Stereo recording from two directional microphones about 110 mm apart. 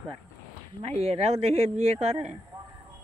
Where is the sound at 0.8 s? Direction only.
70° right (ahead or behind).